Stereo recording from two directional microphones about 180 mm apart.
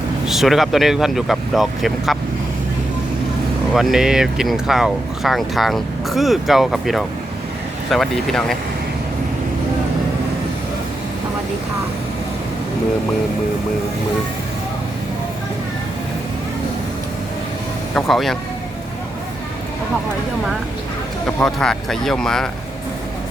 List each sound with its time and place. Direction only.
0.3 s speech: centre (ahead or behind)
3.8 s speech: centre (ahead or behind)
17.9 s speech: centre (ahead or behind)
21.3 s speech: 5° left (ahead or behind)